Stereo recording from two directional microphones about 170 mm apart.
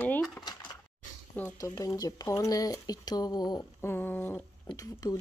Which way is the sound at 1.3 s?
10° left (ahead or behind).